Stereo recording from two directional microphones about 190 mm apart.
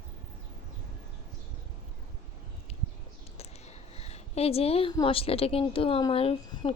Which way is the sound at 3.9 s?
35° left (ahead or behind).